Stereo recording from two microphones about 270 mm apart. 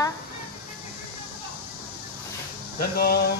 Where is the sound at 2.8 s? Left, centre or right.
Left.